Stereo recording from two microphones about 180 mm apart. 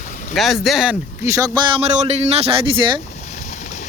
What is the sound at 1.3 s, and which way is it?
Speech, 20° right (ahead or behind).